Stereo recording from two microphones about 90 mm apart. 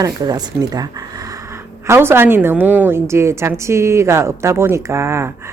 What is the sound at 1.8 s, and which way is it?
Speech, 30° right (ahead or behind).